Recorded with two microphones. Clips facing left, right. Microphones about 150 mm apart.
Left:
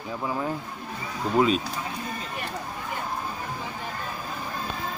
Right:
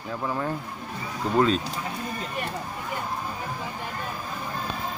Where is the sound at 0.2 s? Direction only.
10° left (ahead or behind).